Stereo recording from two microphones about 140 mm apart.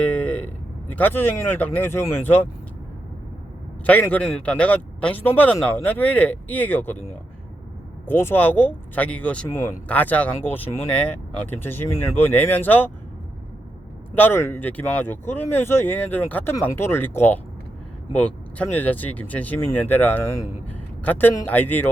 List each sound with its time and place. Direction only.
0.0 s vehicle: 10° left (ahead or behind)
0.9 s speech: 15° left (ahead or behind)
3.8 s speech: 10° left (ahead or behind)
8.0 s speech: 15° left (ahead or behind)
14.2 s speech: 15° left (ahead or behind)